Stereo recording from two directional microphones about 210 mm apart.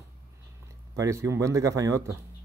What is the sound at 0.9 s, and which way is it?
Speech, 15° right (ahead or behind).